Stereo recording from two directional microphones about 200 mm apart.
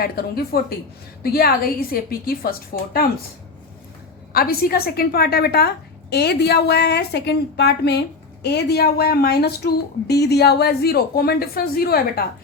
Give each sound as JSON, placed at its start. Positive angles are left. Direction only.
{"t": 0.0, "sound": "a woman's voice", "side_deg": 50}
{"t": 4.3, "sound": "a woman's voice", "side_deg": 50}